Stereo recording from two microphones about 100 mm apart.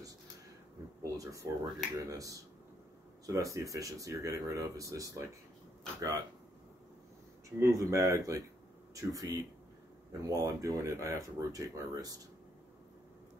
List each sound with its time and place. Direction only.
1.0 s a sound: 35° right (ahead or behind)
2.0 s speech: 35° right (ahead or behind)
7.4 s speech: 30° right (ahead or behind)